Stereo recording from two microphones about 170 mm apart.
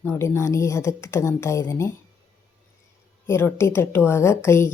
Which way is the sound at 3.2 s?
15° left (ahead or behind).